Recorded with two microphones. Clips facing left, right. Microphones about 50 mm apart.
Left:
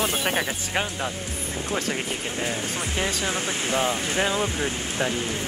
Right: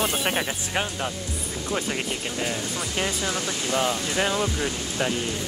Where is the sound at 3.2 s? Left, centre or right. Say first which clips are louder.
Left 1 dB; left.